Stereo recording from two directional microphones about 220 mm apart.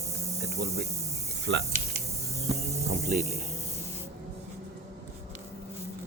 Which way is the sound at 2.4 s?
30° right (ahead or behind).